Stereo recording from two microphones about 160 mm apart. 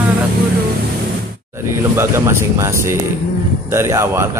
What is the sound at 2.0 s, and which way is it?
Speech, 15° right (ahead or behind).